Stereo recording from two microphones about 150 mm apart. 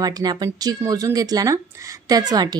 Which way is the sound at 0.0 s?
25° right (ahead or behind).